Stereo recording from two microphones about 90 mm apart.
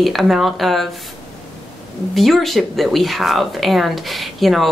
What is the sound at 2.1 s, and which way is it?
Speech, centre (ahead or behind).